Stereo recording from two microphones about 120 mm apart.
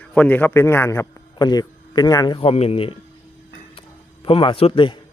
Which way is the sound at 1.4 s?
35° left (ahead or behind).